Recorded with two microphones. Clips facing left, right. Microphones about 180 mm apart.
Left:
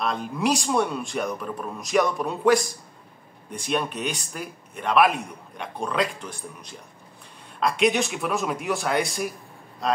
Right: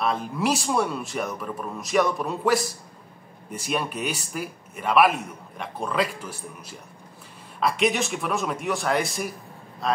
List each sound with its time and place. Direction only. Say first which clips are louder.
0.0 s a man's voice: even; centre (ahead or behind)